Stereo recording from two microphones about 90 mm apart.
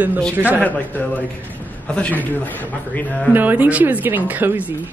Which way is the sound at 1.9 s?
15° left (ahead or behind).